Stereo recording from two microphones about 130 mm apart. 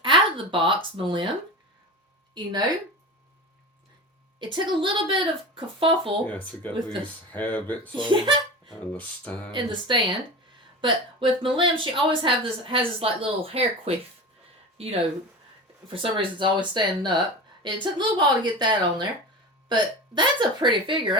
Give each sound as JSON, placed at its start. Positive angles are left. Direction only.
{"t": 0.0, "sound": "a sound", "side_deg": -40}
{"t": 0.9, "sound": "a woman's voice", "side_deg": -40}
{"t": 2.3, "sound": "a woman's voice", "side_deg": -30}
{"t": 4.4, "sound": "a woman's voice", "side_deg": -35}
{"t": 6.2, "sound": "speech", "side_deg": 10}
{"t": 7.9, "sound": "a woman's voice", "side_deg": -40}
{"t": 8.9, "sound": "speech", "side_deg": 10}
{"t": 9.5, "sound": "a woman's voice", "side_deg": -40}
{"t": 15.9, "sound": "a woman's voice", "side_deg": -40}